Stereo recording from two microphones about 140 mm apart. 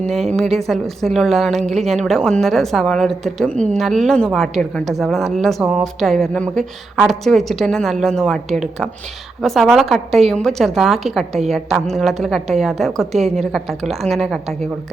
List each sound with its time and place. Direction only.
0.3 s a woman's voice: centre (ahead or behind)